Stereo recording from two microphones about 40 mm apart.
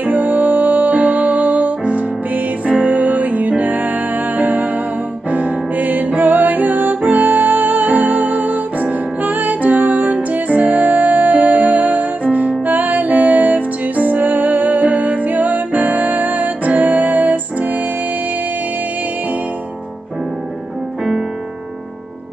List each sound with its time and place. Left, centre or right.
0.0 s music: right